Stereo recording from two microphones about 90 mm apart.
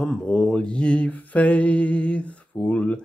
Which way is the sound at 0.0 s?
10° left (ahead or behind).